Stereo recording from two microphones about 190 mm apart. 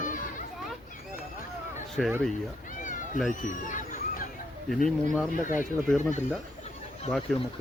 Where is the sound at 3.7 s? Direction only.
40° left (ahead or behind).